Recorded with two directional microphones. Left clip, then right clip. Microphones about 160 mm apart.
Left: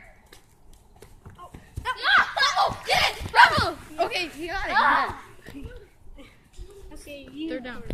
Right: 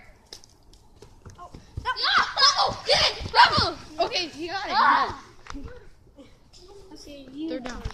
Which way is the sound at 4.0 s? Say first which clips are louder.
Even; 15° right (ahead or behind).